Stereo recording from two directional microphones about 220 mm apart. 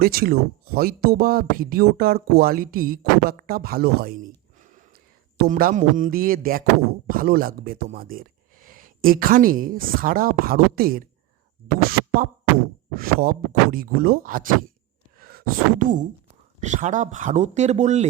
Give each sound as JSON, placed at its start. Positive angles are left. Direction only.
{"t": 0.0, "sound": "speech", "side_deg": -45}
{"t": 4.6, "sound": "a sound", "side_deg": -35}
{"t": 5.4, "sound": "speech", "side_deg": -40}
{"t": 11.9, "sound": "scratching", "side_deg": -40}
{"t": 13.0, "sound": "speech", "side_deg": -40}